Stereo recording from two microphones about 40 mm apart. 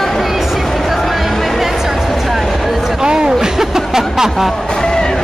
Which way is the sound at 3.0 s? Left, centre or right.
Centre.